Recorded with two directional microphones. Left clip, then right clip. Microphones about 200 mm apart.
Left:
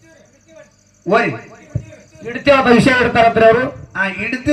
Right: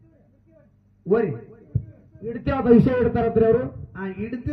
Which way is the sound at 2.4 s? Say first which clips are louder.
Left 8 dB; 50° right (ahead or behind).